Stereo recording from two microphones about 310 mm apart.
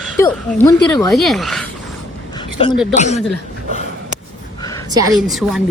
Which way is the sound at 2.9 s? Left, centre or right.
Left.